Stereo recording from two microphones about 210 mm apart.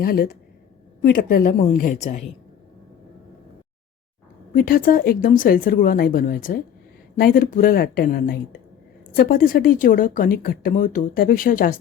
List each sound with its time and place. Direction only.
0.0 s speech: 45° left (ahead or behind)
4.5 s speech: 40° left (ahead or behind)